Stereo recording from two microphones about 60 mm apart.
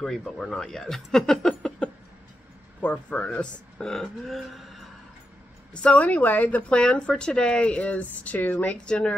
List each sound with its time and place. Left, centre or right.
0.0 s speech: centre
2.8 s speech: left; by 4.8 s centre
5.7 s speech: centre
8.8 s speech: centre